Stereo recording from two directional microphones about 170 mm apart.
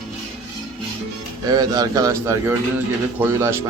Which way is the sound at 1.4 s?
20° right (ahead or behind).